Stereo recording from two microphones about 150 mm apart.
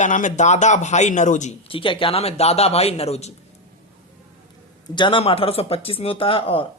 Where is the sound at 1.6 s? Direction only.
35° left (ahead or behind).